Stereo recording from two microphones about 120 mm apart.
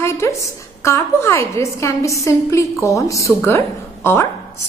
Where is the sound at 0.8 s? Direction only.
20° left (ahead or behind).